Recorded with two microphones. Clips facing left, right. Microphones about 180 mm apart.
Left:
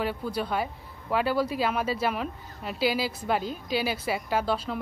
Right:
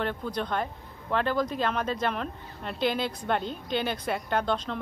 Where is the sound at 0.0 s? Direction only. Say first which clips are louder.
Left 1 dB; 5° left (ahead or behind).